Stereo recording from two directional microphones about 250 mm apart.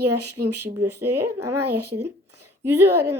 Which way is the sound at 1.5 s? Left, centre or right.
Right.